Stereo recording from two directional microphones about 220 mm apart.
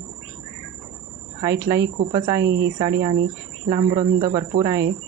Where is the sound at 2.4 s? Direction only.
50° right (ahead or behind).